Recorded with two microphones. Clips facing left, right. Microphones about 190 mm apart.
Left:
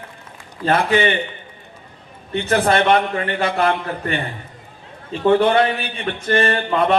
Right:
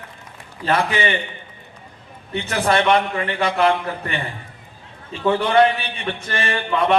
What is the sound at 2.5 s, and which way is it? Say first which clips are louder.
A man's voice: left 2 dB; 55° left (ahead or behind).